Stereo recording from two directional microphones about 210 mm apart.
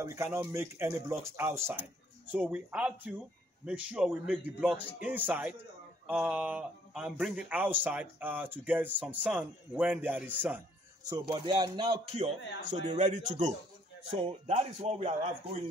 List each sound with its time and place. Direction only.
0.0 s a man's voice: 15° right (ahead or behind)
11.1 s a man's voice: 20° right (ahead or behind)